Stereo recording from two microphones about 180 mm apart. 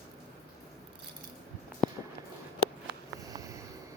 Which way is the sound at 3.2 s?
20° right (ahead or behind).